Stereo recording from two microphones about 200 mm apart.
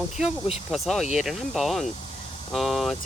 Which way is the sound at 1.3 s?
Centre (ahead or behind).